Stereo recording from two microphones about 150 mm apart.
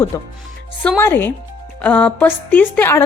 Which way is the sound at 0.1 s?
25° left (ahead or behind).